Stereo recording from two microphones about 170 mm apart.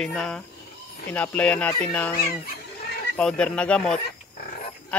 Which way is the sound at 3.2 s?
5° left (ahead or behind).